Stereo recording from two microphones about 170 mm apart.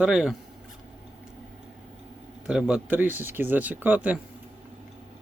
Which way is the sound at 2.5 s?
5° right (ahead or behind).